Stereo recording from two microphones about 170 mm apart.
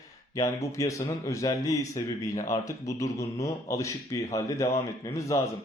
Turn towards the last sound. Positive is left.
turn(degrees=20)  # may be behind; listen again after turning